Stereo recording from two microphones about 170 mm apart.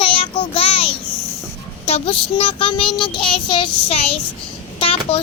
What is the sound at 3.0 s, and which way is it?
Child singing, 30° left (ahead or behind).